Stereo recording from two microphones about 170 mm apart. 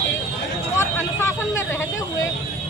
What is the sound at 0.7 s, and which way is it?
Speech, 15° left (ahead or behind).